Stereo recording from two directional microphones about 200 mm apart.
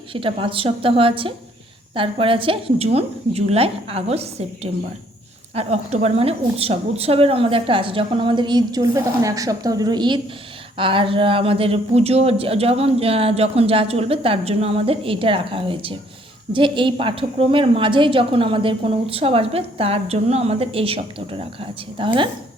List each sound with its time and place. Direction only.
0.1 s speech: 25° right (ahead or behind)